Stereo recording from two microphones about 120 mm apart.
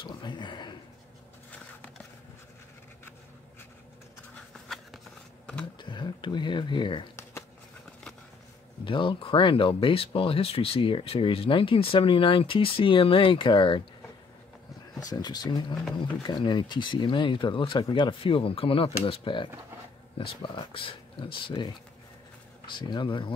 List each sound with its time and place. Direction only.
0.0 s speech: 40° left (ahead or behind)
5.8 s speech: 40° left (ahead or behind)
8.8 s speech: 45° left (ahead or behind)
15.0 s speech: 35° left (ahead or behind)